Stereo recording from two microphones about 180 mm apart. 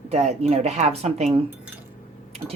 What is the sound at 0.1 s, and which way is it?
Speech, 35° right (ahead or behind).